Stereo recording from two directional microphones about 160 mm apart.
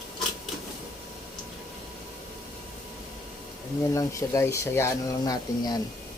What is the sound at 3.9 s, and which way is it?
Speech, 20° left (ahead or behind).